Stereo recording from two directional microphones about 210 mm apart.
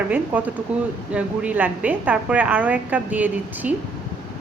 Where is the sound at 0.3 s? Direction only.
5° right (ahead or behind).